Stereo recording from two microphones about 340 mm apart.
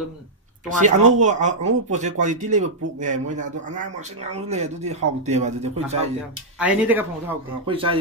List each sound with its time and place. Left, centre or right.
0.7 s speech: right
6.6 s speech: centre